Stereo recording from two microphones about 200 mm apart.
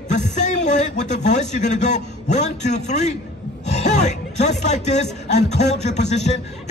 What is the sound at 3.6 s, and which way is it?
Music, 35° left (ahead or behind).